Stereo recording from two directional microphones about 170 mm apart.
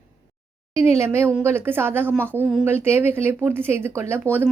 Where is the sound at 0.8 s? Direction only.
15° right (ahead or behind).